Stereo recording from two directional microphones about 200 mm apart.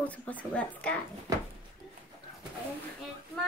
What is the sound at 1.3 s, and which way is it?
Speech, 15° right (ahead or behind).